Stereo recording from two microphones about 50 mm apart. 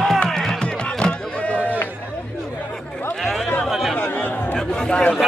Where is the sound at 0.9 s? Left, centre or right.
Left.